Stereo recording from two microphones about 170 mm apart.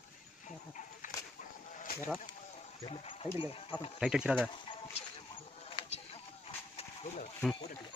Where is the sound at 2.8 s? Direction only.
35° left (ahead or behind).